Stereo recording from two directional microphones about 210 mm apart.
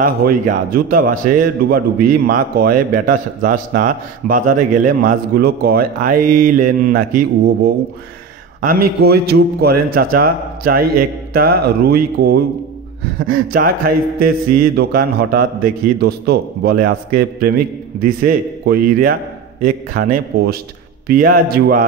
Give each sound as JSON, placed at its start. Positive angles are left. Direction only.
{"t": 0.0, "sound": "a man's voice", "side_deg": -40}
{"t": 8.5, "sound": "mantra", "side_deg": -45}
{"t": 19.6, "sound": "a man's voice", "side_deg": -40}
{"t": 21.1, "sound": "mantra", "side_deg": -45}